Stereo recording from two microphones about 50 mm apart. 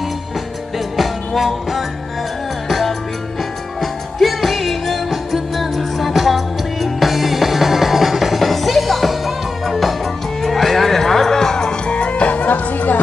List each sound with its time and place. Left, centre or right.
0.9 s music: centre
3.8 s music: centre
11.9 s music: left